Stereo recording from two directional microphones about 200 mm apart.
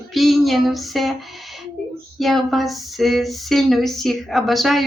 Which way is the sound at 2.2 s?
Centre (ahead or behind).